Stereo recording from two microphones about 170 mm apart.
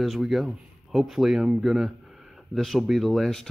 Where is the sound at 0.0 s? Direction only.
Centre (ahead or behind).